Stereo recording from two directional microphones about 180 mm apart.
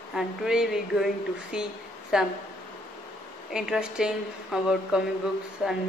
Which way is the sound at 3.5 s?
5° right (ahead or behind).